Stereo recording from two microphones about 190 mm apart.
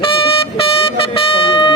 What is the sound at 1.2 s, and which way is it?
Vehicle, 30° left (ahead or behind).